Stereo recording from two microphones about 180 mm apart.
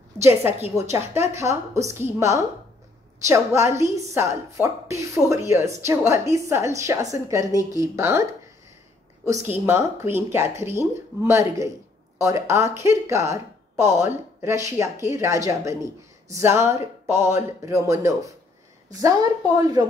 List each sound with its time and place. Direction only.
0.2 s a woman's voice: 15° right (ahead or behind)